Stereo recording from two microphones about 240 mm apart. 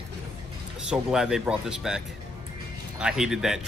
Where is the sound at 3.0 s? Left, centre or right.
Centre.